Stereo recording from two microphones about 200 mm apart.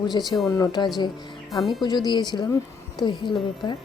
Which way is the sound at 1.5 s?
Centre (ahead or behind).